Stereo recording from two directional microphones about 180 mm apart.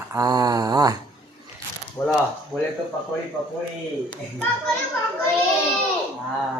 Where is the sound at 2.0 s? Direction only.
10° left (ahead or behind).